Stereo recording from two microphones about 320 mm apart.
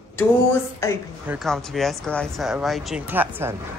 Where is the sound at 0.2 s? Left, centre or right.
Centre.